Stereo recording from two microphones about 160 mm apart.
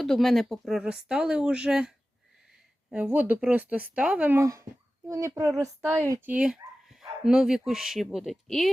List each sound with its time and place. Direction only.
0.0 s a woman's voice: centre (ahead or behind)